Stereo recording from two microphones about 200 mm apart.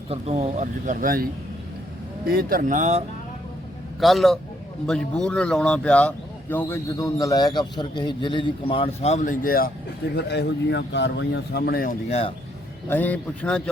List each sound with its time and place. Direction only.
0.1 s speech: 30° right (ahead or behind)
4.0 s a man's voice: centre (ahead or behind); by 9.7 s 45° left (ahead or behind)
10.2 s speech: 55° left (ahead or behind)
12.9 s speech: 10° left (ahead or behind)